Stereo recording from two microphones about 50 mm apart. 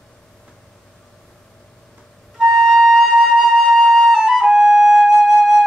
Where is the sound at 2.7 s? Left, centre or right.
Centre.